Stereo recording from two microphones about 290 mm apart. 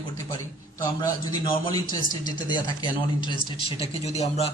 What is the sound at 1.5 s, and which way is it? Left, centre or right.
A man's voice, centre.